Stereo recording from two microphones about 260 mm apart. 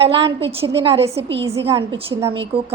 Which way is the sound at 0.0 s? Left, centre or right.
Right.